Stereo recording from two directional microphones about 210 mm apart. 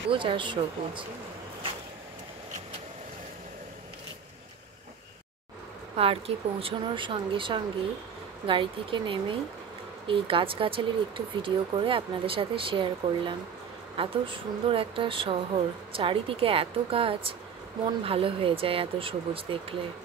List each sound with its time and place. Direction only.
0.1 s speech: 25° right (ahead or behind)
5.9 s speech: 25° right (ahead or behind)